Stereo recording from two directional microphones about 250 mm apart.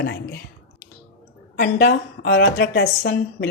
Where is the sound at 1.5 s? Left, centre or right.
Left.